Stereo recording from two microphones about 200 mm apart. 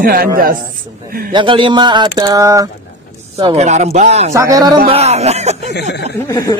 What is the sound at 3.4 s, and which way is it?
Speech, 30° right (ahead or behind).